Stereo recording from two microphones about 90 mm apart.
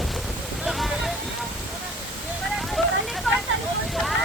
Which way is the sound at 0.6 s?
Centre (ahead or behind).